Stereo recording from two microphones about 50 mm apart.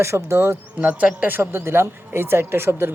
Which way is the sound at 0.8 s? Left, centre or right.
Right.